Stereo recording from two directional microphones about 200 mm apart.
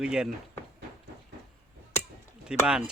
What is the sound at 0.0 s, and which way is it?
Speech, 5° right (ahead or behind).